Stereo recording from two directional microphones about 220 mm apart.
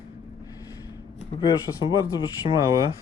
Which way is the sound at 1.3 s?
20° left (ahead or behind).